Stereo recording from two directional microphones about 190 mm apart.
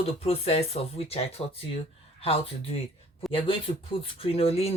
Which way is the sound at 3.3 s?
30° left (ahead or behind).